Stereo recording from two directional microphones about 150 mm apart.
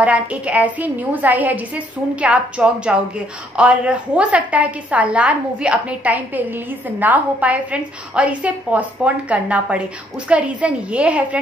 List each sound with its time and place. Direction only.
0.0 s a woman's voice: 10° right (ahead or behind)